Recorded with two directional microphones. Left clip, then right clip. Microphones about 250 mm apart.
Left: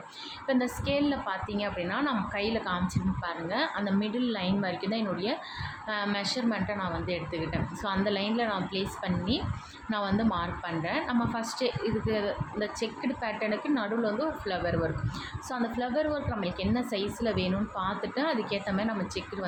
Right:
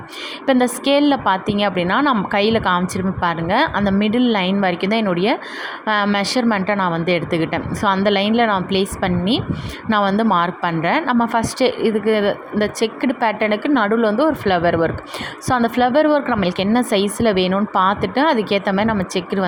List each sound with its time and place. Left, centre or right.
0.4 s a woman's voice: right